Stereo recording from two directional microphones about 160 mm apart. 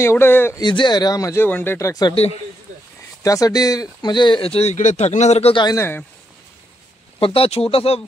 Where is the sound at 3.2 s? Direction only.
20° left (ahead or behind); by 5.6 s 40° left (ahead or behind).